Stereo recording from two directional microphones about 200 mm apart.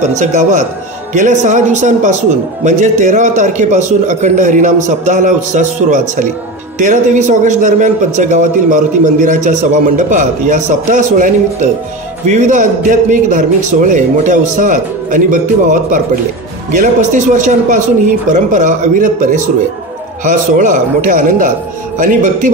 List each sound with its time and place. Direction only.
0.2 s a man's voice: 35° right (ahead or behind)